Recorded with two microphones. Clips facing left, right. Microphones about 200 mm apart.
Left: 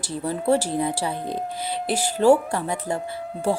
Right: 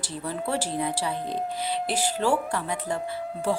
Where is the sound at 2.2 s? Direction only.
45° left (ahead or behind).